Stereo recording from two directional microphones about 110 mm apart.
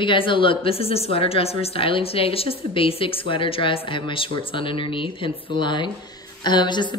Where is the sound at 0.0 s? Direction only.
50° left (ahead or behind).